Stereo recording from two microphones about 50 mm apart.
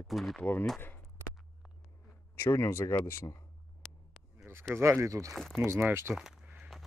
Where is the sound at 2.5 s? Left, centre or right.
Left.